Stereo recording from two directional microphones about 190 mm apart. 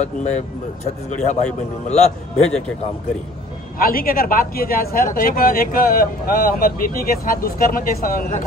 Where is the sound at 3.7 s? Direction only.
50° left (ahead or behind).